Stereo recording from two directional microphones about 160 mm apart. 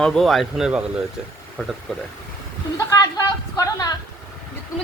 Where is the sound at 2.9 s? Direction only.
20° left (ahead or behind).